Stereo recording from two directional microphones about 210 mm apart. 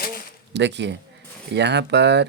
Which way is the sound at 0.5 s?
55° right (ahead or behind).